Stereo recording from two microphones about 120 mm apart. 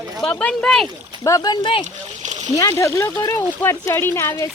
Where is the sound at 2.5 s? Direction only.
25° left (ahead or behind).